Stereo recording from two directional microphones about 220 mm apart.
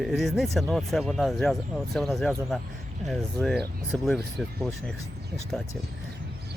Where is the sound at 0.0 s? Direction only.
Centre (ahead or behind).